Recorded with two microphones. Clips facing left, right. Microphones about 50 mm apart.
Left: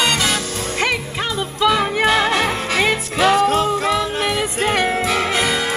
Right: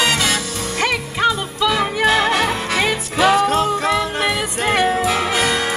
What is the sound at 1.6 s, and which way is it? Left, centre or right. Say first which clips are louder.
Music: left 1 dB; centre.